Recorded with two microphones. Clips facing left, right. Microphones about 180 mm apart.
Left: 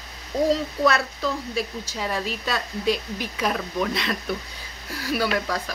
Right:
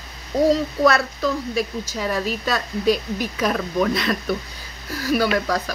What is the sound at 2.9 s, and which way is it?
Speech, 45° right (ahead or behind).